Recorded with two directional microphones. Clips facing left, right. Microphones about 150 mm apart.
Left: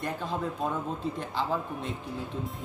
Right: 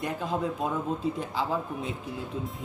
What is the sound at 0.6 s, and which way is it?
A man's voice, centre (ahead or behind).